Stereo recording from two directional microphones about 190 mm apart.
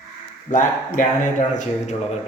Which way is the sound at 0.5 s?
45° left (ahead or behind).